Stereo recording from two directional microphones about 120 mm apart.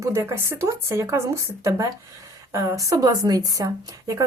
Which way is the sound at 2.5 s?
25° right (ahead or behind).